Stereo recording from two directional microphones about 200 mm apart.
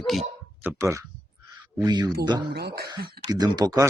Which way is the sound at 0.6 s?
15° right (ahead or behind).